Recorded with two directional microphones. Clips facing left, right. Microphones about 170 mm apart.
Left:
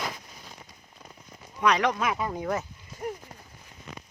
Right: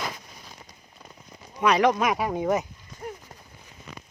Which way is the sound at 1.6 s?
10° right (ahead or behind).